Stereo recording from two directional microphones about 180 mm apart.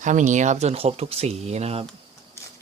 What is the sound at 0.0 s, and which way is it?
Speech, 45° right (ahead or behind).